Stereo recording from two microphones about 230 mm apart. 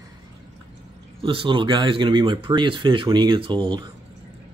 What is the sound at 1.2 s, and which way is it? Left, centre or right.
Speech, right.